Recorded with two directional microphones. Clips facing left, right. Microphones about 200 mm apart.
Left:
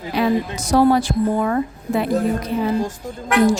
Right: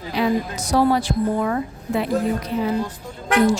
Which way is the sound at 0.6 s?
50° left (ahead or behind).